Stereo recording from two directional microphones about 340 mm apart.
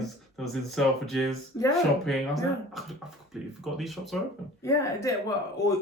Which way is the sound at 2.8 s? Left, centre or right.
Centre.